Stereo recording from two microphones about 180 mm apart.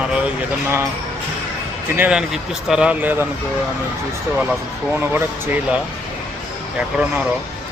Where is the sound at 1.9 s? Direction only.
5° right (ahead or behind).